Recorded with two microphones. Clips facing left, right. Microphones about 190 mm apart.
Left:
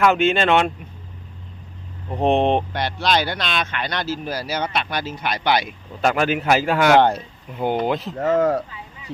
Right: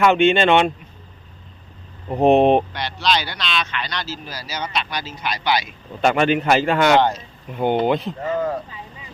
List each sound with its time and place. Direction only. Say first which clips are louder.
0.0 s speech: right 2 dB; centre (ahead or behind)
2.0 s speech: right 4 dB; 10° right (ahead or behind)
2.7 s speech: left 2 dB; 50° left (ahead or behind)
6.0 s speech: right 2 dB; centre (ahead or behind)
8.2 s speech: left 5 dB; 75° left (ahead or behind)